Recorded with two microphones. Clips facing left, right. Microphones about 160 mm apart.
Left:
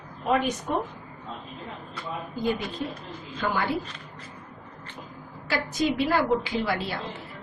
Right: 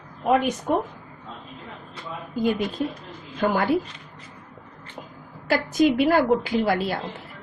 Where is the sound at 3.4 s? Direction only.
45° right (ahead or behind).